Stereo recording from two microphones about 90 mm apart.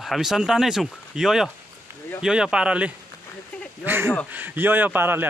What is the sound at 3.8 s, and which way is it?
A man's voice, 25° right (ahead or behind).